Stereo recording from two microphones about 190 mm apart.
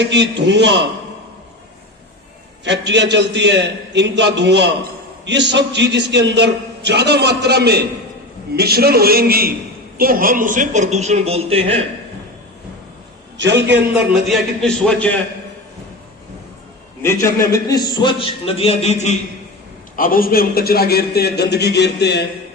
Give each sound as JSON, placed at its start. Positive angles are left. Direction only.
{"t": 0.0, "sound": "a man's voice", "side_deg": -65}
{"t": 2.6, "sound": "a man's voice", "side_deg": -65}
{"t": 13.3, "sound": "a man's voice", "side_deg": -65}
{"t": 13.9, "sound": "a man's voice", "side_deg": 0}
{"t": 17.0, "sound": "a man's voice", "side_deg": 15}
{"t": 20.0, "sound": "a man's voice", "side_deg": 50}